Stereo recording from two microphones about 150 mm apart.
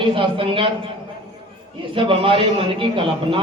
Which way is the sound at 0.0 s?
35° right (ahead or behind).